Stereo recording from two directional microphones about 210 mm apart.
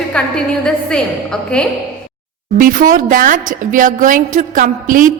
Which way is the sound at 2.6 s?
40° right (ahead or behind).